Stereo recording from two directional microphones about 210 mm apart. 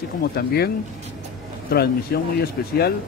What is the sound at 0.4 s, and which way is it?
Speech, 45° left (ahead or behind).